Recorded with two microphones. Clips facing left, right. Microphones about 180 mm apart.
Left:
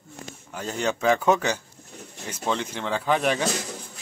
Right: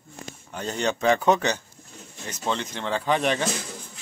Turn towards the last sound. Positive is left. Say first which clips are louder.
# even
turn(degrees=5)  # may be behind; listen again after turning